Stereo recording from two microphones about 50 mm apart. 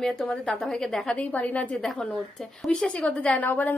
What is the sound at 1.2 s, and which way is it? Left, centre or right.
Speech, left.